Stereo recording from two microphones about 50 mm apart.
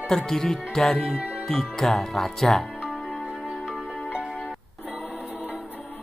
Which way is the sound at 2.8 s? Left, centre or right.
Centre.